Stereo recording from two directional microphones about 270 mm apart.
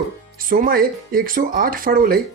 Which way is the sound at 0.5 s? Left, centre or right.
Right.